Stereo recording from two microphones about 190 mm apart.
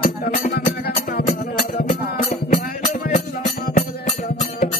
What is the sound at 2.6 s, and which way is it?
Music, 55° left (ahead or behind).